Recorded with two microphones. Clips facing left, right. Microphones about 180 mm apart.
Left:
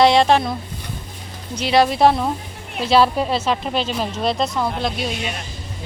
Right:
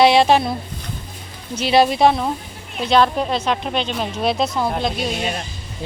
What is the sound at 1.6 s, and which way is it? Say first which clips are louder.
Speech: right 1 dB; 25° right (ahead or behind).